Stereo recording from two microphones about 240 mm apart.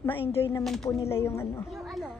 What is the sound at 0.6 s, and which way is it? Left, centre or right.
Speech, centre.